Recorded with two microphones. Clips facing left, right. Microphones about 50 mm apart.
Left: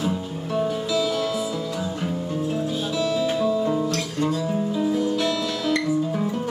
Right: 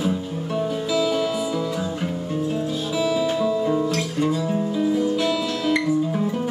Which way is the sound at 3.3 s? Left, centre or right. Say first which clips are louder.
Right 1 dB; centre.